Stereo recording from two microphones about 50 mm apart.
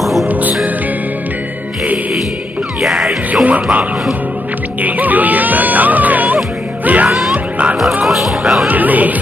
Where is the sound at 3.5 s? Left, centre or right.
Right.